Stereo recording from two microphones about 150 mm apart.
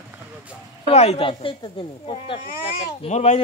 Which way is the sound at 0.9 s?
45° left (ahead or behind).